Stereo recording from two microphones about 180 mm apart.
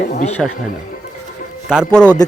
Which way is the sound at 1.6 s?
Centre (ahead or behind).